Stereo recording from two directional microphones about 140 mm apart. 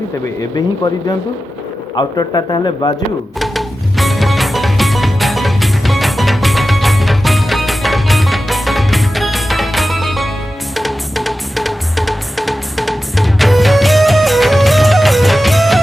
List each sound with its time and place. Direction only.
2.0 s speech: 30° left (ahead or behind)
3.3 s music: centre (ahead or behind)